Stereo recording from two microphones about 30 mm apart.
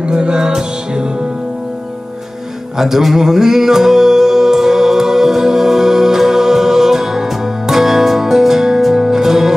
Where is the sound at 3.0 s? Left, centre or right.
Centre.